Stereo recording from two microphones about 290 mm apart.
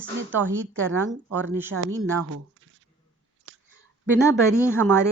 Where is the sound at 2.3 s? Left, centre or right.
Right.